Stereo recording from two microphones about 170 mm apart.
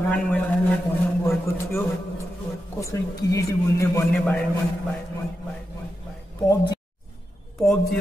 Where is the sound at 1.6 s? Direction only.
15° left (ahead or behind).